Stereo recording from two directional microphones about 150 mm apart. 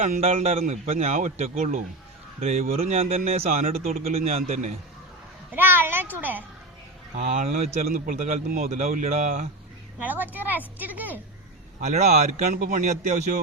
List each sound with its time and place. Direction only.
0.0 s a man's voice: 45° right (ahead or behind)
5.5 s a child's voice: 15° right (ahead or behind)
7.2 s a man's voice: 50° right (ahead or behind)
10.0 s a child's voice: 10° right (ahead or behind)
11.8 s a man's voice: 50° right (ahead or behind)
12.5 s a man's voice: 65° right (ahead or behind)